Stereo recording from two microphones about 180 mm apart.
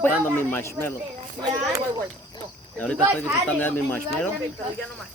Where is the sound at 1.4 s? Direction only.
25° right (ahead or behind).